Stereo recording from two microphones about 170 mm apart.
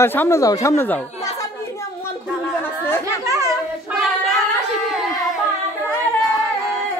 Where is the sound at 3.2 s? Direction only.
20° right (ahead or behind).